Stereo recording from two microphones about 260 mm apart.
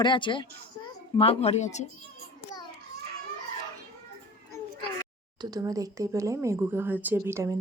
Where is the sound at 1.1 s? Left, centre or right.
Left.